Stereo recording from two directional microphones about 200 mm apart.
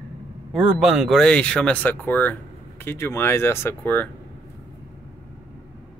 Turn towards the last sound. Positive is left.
turn(degrees=10)  # may be behind; listen again after turning